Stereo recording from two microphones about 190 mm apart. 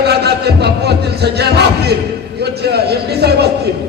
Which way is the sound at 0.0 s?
60° right (ahead or behind).